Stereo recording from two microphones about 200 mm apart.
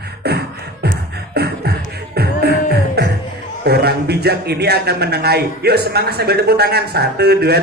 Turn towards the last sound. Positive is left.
turn(degrees=-55)  # may be behind; listen again after turning